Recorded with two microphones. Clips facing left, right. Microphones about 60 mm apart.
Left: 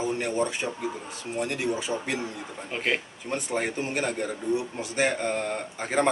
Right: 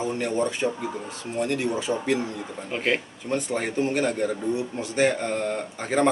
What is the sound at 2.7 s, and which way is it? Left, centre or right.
Speech, centre.